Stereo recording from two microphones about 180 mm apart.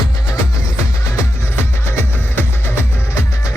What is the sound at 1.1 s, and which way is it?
Music, 15° left (ahead or behind).